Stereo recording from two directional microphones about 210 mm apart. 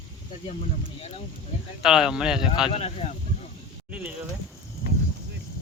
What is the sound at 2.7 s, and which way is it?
Speech, 30° left (ahead or behind).